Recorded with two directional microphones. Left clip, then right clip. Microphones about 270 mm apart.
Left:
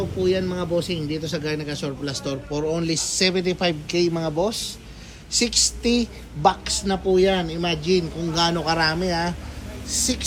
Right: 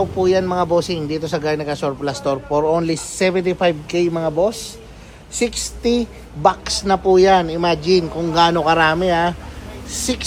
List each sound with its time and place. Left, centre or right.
0.2 s a man's voice: centre
5.8 s a woman's voice: centre
6.4 s a man's voice: centre
8.5 s speech: right
9.0 s a man's voice: centre